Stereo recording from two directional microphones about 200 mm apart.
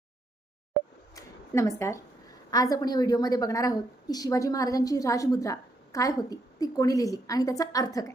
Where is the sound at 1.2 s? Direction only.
15° left (ahead or behind).